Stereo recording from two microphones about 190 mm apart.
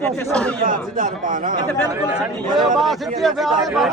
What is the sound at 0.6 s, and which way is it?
Speech, 45° right (ahead or behind).